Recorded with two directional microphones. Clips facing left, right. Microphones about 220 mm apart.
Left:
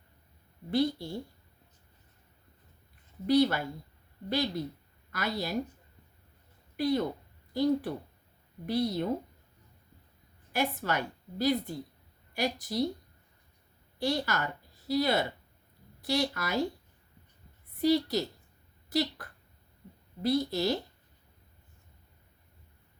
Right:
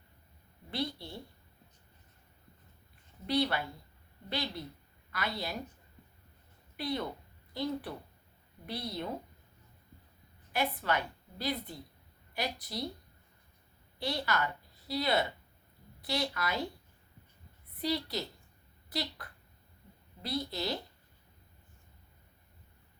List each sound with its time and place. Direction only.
0.7 s a woman's voice: 45° left (ahead or behind)
3.2 s a woman's voice: 45° left (ahead or behind)
6.7 s a woman's voice: 45° left (ahead or behind)
10.5 s a woman's voice: 45° left (ahead or behind)
14.0 s a woman's voice: 45° left (ahead or behind)
17.7 s a woman's voice: 45° left (ahead or behind)